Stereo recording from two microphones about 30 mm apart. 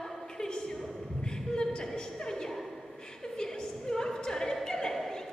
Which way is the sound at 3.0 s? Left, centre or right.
Centre.